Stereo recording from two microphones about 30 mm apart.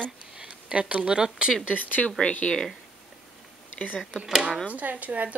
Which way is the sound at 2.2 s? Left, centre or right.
Left.